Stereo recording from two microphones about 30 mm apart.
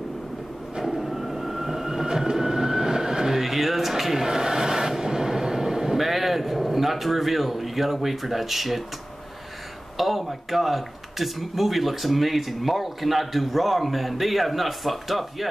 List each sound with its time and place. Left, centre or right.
1.0 s train: centre
2.0 s train: right
3.3 s a sound: centre
9.9 s speech: centre